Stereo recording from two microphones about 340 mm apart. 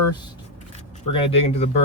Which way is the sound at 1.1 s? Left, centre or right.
Centre.